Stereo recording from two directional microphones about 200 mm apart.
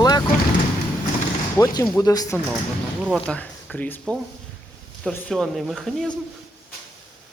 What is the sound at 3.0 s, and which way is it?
Speech, 5° right (ahead or behind).